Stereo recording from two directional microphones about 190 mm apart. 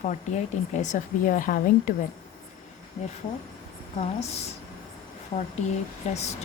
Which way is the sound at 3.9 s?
35° left (ahead or behind).